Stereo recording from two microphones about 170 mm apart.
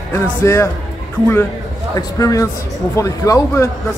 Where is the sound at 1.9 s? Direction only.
20° left (ahead or behind).